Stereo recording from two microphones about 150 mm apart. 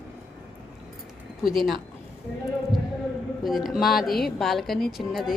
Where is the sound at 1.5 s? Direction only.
Centre (ahead or behind).